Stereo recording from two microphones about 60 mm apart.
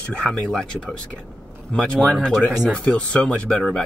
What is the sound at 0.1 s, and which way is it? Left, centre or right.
Speech, centre.